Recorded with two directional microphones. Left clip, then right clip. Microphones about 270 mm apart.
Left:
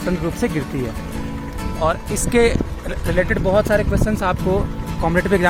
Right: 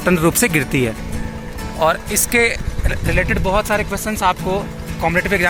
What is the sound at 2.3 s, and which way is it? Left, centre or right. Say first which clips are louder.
Speech: even; centre.